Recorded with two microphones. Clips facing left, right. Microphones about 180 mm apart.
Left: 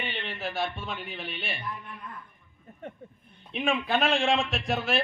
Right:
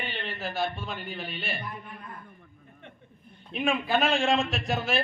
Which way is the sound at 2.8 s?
40° left (ahead or behind).